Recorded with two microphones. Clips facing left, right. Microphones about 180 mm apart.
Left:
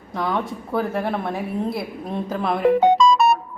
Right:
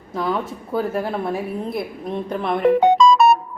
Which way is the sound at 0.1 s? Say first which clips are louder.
Right 1 dB; centre (ahead or behind).